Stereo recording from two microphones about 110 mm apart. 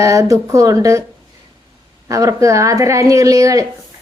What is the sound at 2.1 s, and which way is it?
A woman's voice, 30° right (ahead or behind).